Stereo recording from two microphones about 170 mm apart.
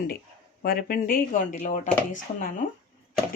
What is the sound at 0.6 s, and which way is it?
Speech, 60° left (ahead or behind).